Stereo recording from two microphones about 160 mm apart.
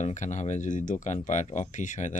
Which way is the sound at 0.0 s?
50° left (ahead or behind).